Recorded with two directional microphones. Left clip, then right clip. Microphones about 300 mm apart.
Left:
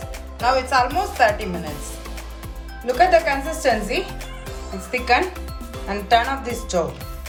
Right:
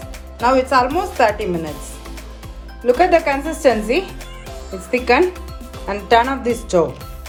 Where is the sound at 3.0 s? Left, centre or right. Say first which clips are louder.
Left 1 dB; right.